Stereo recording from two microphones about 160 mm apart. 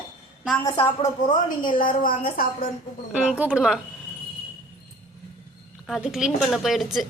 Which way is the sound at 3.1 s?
10° right (ahead or behind).